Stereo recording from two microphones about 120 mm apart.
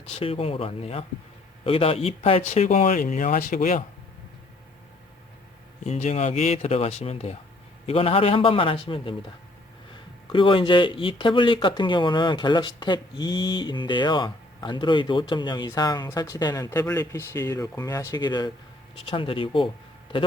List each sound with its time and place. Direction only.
0.2 s a man's voice: 50° left (ahead or behind)
2.5 s speech: 65° left (ahead or behind); by 3.4 s 90° left
5.8 s speech: 75° left (ahead or behind)
7.9 s a man's voice: 50° left (ahead or behind)
10.3 s speech: 45° left (ahead or behind)
19.1 s a man's voice: 50° left (ahead or behind)